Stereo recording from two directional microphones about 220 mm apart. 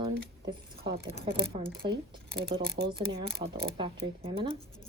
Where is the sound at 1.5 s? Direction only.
25° right (ahead or behind).